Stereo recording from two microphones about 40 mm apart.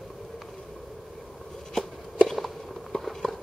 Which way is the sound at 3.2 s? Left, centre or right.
Centre.